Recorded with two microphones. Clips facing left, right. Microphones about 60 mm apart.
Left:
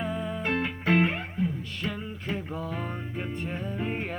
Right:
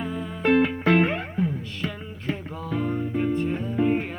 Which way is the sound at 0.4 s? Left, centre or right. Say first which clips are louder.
Right 9 dB; right.